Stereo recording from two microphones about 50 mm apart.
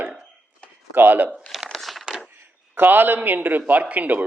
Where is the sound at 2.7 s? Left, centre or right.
Right.